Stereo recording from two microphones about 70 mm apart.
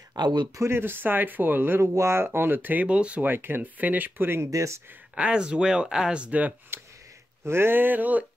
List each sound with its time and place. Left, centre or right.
0.1 s speech: right
0.6 s speech: right
1.8 s speech: right; by 3.3 s centre
3.3 s speech: right
4.5 s speech: right
5.1 s speech: centre
6.7 s a sound: right
7.4 s speech: right